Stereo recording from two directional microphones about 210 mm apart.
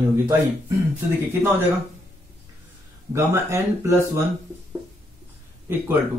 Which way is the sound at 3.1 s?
15° right (ahead or behind).